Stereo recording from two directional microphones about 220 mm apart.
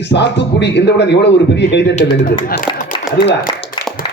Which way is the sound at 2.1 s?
40° left (ahead or behind).